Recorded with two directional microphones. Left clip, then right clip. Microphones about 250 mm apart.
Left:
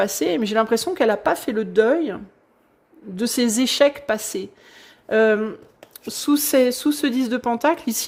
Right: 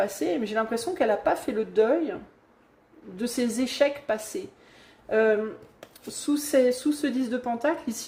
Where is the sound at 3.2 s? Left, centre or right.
Left.